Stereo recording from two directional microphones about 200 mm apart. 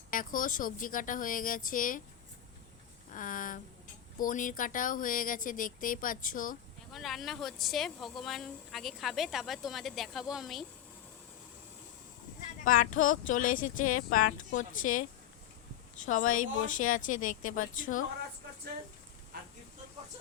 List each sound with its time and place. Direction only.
0.1 s speech: 45° left (ahead or behind)
3.1 s speech: 40° left (ahead or behind)
6.9 s a woman's voice: centre (ahead or behind)
12.6 s speech: 40° left (ahead or behind)
16.0 s speech: 40° left (ahead or behind)